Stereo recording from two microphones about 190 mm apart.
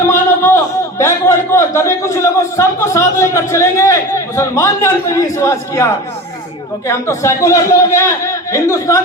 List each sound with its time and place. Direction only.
0.1 s a man's voice: 15° left (ahead or behind)